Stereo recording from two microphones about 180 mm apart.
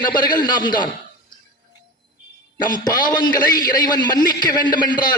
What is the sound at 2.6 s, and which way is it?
A man's voice, 25° left (ahead or behind).